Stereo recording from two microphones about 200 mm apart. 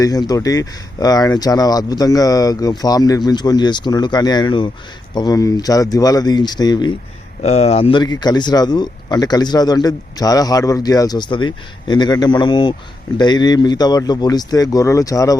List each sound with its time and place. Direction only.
0.0 s speech: 20° left (ahead or behind)
7.4 s speech: 30° left (ahead or behind)